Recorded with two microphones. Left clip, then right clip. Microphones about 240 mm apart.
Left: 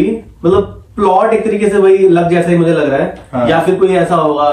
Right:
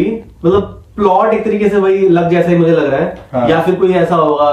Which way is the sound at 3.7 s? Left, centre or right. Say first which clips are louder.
Left 1 dB; centre.